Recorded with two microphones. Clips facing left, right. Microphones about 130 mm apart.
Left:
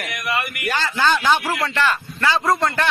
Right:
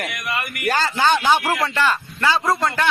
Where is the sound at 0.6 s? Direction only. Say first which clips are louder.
Right 3 dB; 40° right (ahead or behind).